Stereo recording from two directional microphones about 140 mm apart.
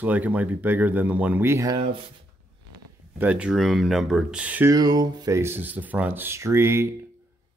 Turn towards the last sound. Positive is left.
turn(degrees=-20)  # may be behind; listen again after turning